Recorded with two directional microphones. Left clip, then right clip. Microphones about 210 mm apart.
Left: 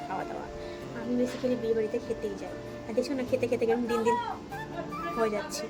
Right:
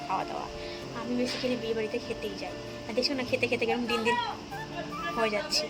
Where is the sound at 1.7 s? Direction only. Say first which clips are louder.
Left 2 dB; centre (ahead or behind).